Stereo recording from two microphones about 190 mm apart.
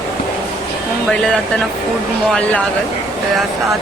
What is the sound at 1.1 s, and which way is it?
Speech, 5° left (ahead or behind).